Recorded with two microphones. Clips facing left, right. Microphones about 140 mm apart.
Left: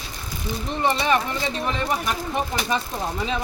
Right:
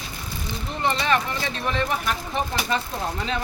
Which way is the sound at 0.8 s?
15° left (ahead or behind).